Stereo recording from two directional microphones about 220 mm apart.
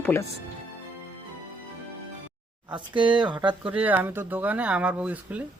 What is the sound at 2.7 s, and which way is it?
Speech, 20° right (ahead or behind).